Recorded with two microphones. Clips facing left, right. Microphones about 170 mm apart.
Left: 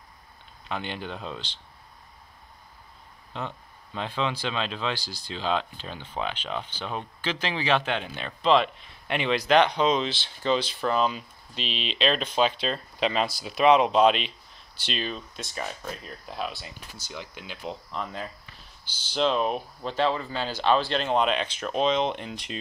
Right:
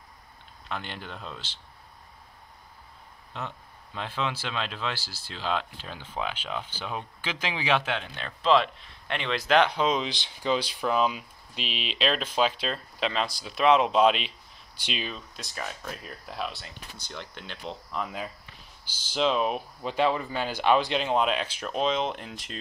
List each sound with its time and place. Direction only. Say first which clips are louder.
0.7 s speech: left 4 dB; centre (ahead or behind)
3.3 s speech: left 2 dB; centre (ahead or behind)
8.0 s speech: left 3 dB; 5° left (ahead or behind)
18.0 s speech: even; 5° right (ahead or behind)